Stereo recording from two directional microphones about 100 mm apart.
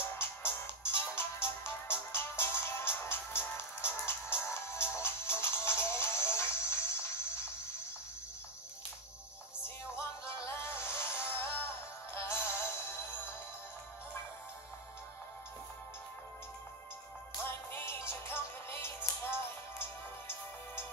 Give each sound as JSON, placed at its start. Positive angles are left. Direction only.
{"t": 0.0, "sound": "music", "side_deg": 25}
{"t": 9.6, "sound": "music", "side_deg": 25}
{"t": 17.5, "sound": "music", "side_deg": 25}